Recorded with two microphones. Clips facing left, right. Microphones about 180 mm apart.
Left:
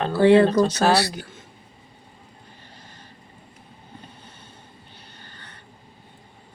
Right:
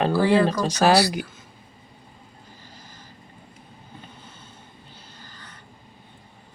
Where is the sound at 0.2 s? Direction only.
25° left (ahead or behind).